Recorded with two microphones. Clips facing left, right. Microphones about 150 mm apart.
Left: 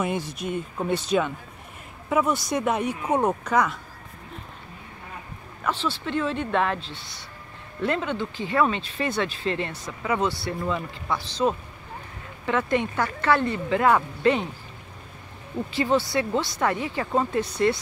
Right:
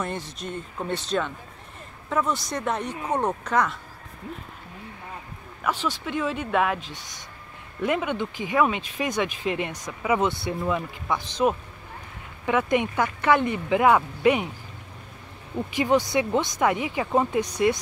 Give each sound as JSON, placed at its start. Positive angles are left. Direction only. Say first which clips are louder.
{"t": 0.0, "sound": "speech", "louder": "left 4 dB", "side_deg": 10}
{"t": 5.6, "sound": "speech", "louder": "even", "side_deg": -10}
{"t": 15.7, "sound": "speech", "louder": "right 1 dB", "side_deg": -15}